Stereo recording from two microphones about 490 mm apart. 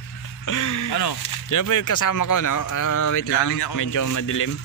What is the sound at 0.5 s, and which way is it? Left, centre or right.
Speech, left.